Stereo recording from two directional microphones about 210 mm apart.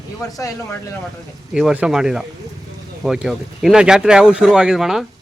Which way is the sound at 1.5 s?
5° right (ahead or behind).